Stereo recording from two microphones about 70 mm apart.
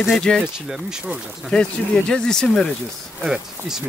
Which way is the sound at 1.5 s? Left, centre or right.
Centre.